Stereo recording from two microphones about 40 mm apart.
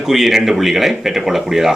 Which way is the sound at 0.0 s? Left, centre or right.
Centre.